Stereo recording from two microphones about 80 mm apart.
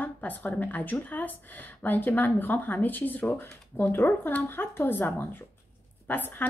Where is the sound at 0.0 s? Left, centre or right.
Left.